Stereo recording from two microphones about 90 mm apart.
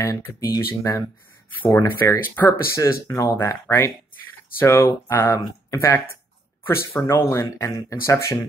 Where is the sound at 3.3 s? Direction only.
25° left (ahead or behind).